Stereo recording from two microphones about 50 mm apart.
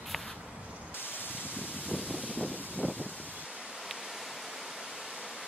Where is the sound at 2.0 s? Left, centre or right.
Right.